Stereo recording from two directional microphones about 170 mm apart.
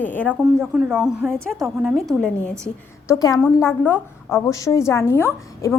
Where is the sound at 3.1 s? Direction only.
20° left (ahead or behind).